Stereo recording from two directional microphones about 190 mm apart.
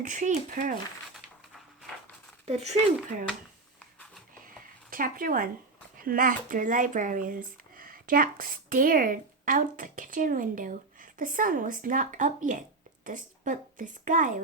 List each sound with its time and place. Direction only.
0.0 s speech: 40° right (ahead or behind)
2.5 s speech: 35° right (ahead or behind)
4.4 s a sound: 50° right (ahead or behind)
6.0 s speech: 45° right (ahead or behind)